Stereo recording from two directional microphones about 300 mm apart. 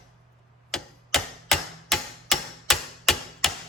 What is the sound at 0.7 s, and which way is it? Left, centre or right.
Tick-tock, centre.